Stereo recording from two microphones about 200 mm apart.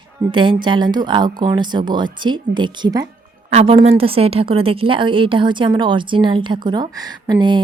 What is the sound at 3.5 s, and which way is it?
A woman's voice, 35° right (ahead or behind).